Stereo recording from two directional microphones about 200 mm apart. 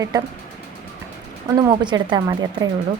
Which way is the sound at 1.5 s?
20° right (ahead or behind).